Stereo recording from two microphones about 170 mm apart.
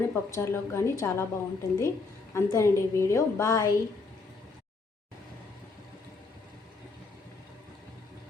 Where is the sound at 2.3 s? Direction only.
15° left (ahead or behind).